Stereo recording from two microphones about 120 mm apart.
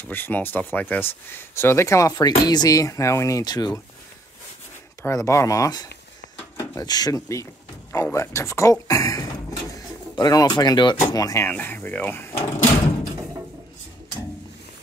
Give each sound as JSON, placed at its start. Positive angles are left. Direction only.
{"t": 0.0, "sound": "speech", "side_deg": 15}
{"t": 5.0, "sound": "speech", "side_deg": 25}
{"t": 6.5, "sound": "a sound", "side_deg": 25}
{"t": 6.9, "sound": "speech", "side_deg": 30}
{"t": 11.4, "sound": "speech", "side_deg": 15}